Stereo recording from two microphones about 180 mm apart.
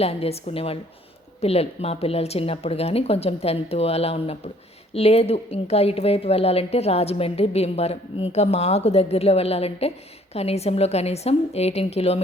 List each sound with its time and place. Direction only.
0.0 s a woman's voice: 35° left (ahead or behind)